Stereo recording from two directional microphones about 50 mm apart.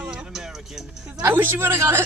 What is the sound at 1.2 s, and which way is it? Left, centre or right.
Speech, right.